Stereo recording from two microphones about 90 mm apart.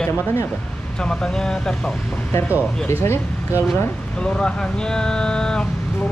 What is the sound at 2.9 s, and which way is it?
Speech, 30° left (ahead or behind).